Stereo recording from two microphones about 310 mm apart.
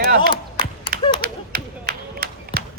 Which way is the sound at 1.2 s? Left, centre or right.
Right.